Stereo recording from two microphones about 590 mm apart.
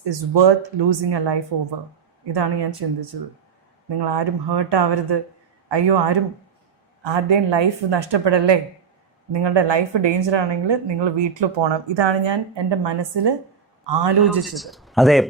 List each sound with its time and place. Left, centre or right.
0.0 s a woman's voice: right
14.3 s speech: centre